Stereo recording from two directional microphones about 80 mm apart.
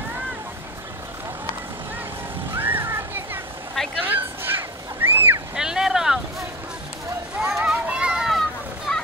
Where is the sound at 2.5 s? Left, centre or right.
Right.